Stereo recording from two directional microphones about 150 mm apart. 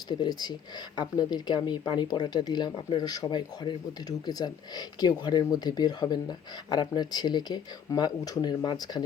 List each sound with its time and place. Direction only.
0.1 s speech: 30° left (ahead or behind)